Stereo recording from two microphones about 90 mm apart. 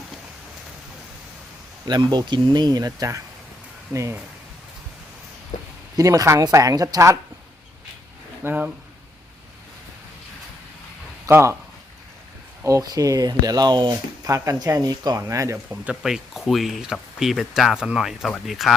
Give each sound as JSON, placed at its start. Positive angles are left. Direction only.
{"t": 1.9, "sound": "speech", "side_deg": -55}
{"t": 6.0, "sound": "speech", "side_deg": -40}
{"t": 8.4, "sound": "speech", "side_deg": -20}
{"t": 11.3, "sound": "speech", "side_deg": -30}
{"t": 12.6, "sound": "speech", "side_deg": -40}
{"t": 14.3, "sound": "speech", "side_deg": -40}
{"t": 15.2, "sound": "speech", "side_deg": -35}
{"t": 15.7, "sound": "speech", "side_deg": -10}